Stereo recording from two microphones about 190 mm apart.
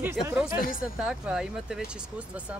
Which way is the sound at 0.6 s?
45° left (ahead or behind).